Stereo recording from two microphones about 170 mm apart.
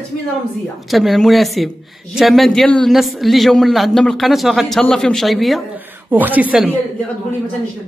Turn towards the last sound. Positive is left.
turn(degrees=-5)  # may be behind; listen again after turning